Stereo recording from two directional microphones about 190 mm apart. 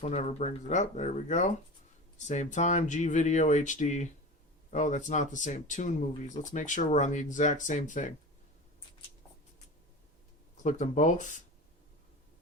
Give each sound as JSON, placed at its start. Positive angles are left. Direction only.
{"t": 0.0, "sound": "speech", "side_deg": 35}
{"t": 10.6, "sound": "speech", "side_deg": 40}